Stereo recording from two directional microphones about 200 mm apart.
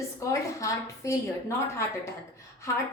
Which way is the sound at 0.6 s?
15° left (ahead or behind).